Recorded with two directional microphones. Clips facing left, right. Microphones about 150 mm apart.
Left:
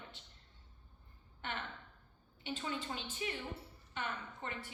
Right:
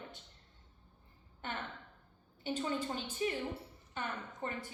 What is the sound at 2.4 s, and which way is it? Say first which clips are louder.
A woman's voice: right 5 dB; 40° right (ahead or behind).